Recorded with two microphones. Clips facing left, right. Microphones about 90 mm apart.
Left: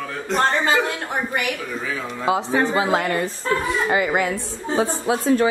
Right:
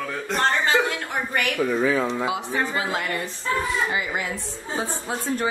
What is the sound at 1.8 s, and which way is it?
Speech, 35° right (ahead or behind).